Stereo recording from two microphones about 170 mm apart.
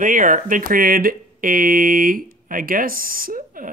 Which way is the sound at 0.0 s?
50° right (ahead or behind).